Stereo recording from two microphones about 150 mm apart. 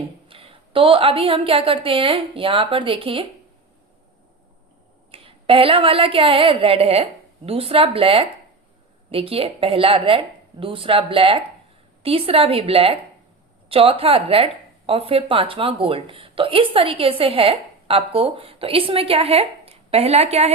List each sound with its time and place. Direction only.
0.3 s a woman's voice: 40° right (ahead or behind)
5.1 s a woman's voice: 40° right (ahead or behind)